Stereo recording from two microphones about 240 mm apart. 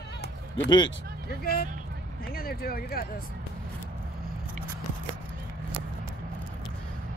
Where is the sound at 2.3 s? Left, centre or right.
Left.